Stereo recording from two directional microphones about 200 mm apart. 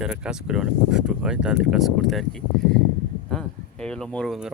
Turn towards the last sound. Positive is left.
turn(degrees=0)  # may be behind; listen again after turning